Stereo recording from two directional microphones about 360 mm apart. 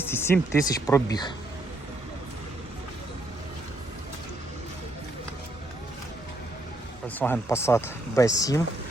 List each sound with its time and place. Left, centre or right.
0.0 s speech: centre
7.2 s speech: centre